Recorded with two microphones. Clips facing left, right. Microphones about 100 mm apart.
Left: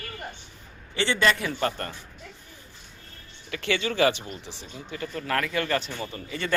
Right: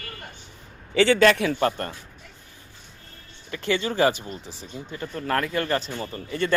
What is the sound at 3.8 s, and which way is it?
Speech, 45° right (ahead or behind).